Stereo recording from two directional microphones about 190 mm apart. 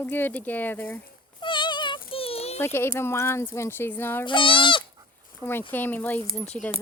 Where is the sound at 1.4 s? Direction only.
25° left (ahead or behind).